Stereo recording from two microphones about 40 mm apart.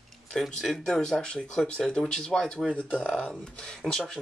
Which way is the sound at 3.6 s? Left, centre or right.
Left.